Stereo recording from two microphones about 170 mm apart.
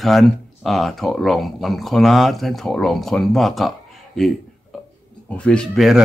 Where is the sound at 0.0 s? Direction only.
Centre (ahead or behind).